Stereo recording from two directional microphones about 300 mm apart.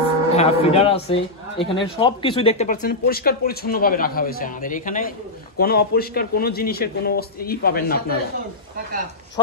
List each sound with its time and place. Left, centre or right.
0.4 s a man's voice: centre